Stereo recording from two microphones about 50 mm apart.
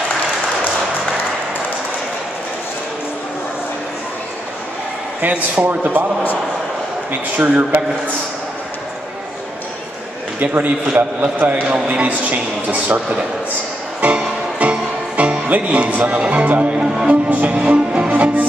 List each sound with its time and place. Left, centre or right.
5.6 s speech: right
7.1 s speech: right
10.4 s speech: right
14.0 s music: right
15.4 s speech: right